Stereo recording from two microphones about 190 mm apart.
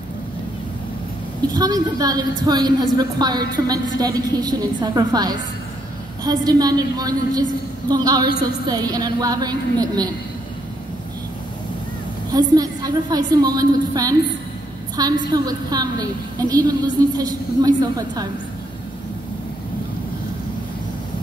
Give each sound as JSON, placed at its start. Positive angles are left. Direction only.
{"t": 1.5, "sound": "a woman's voice", "side_deg": -20}
{"t": 12.3, "sound": "a woman's voice", "side_deg": -20}